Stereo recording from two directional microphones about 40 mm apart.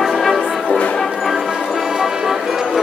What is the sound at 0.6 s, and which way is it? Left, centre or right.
Music, left.